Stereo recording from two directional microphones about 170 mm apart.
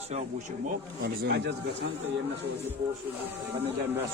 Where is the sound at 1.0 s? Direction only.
70° right (ahead or behind).